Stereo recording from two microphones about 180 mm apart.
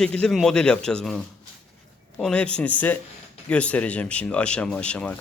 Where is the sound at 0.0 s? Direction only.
5° left (ahead or behind).